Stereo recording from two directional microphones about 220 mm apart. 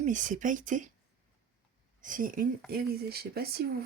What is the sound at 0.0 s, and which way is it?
Speech, 35° right (ahead or behind).